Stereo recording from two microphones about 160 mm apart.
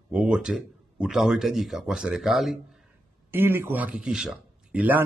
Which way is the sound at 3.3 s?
15° right (ahead or behind).